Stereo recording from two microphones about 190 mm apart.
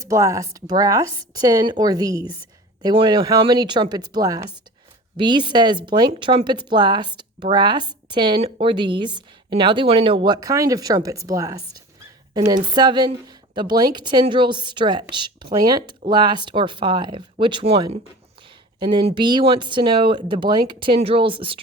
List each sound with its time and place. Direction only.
0.0 s a woman's voice: 15° right (ahead or behind)
12.7 s a woman's voice: 20° right (ahead or behind)